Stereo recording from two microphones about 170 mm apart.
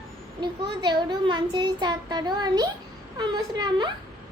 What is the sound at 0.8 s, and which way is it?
A child's voice, 25° right (ahead or behind).